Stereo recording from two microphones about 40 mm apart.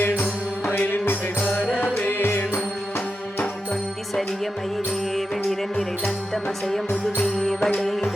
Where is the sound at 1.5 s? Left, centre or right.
Left.